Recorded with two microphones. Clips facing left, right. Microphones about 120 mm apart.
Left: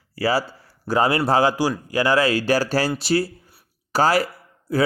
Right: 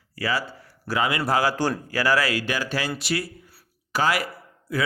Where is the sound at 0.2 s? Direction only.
35° left (ahead or behind).